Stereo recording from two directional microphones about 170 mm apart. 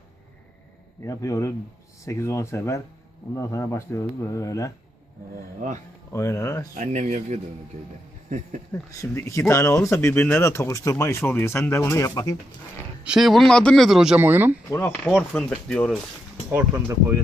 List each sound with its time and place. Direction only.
1.0 s speech: 20° left (ahead or behind)
6.1 s speech: 15° left (ahead or behind)
6.7 s speech: 45° right (ahead or behind)
8.7 s speech: 15° left (ahead or behind)
13.1 s a man's voice: centre (ahead or behind)
14.7 s speech: 15° left (ahead or behind)
15.0 s a man's voice: centre (ahead or behind)
16.5 s speech: 15° right (ahead or behind)